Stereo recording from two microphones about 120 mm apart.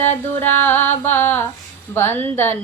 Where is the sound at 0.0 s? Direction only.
15° left (ahead or behind).